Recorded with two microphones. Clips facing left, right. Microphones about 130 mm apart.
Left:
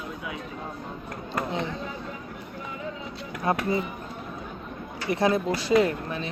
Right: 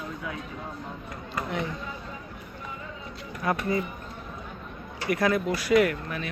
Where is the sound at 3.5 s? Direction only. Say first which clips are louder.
Left 2 dB; 25° left (ahead or behind).